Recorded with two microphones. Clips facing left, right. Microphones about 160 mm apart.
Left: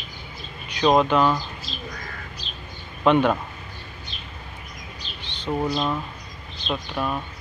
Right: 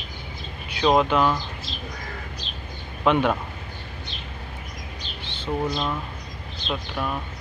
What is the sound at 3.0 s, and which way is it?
Speech, 5° right (ahead or behind).